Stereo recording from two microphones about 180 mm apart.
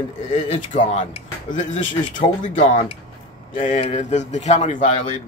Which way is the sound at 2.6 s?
40° left (ahead or behind).